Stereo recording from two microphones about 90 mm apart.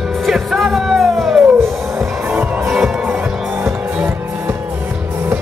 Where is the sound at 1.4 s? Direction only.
20° right (ahead or behind).